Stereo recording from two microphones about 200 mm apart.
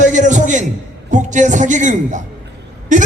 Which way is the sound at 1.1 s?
40° right (ahead or behind).